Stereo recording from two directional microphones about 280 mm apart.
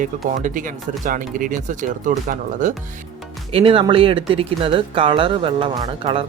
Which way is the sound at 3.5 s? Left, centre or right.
Centre.